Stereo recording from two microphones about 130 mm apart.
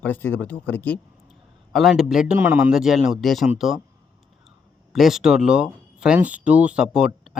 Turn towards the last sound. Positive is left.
turn(degrees=-5)  # may be behind; listen again after turning